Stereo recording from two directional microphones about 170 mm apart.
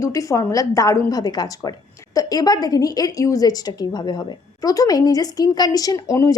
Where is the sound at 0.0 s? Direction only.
20° left (ahead or behind).